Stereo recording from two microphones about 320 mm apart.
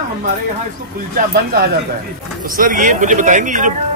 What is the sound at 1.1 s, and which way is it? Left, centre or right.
Speech, right.